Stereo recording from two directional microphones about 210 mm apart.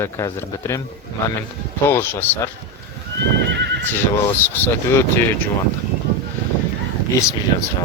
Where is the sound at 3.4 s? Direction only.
55° right (ahead or behind).